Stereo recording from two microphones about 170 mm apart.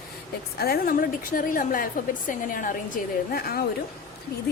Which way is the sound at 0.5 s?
65° left (ahead or behind).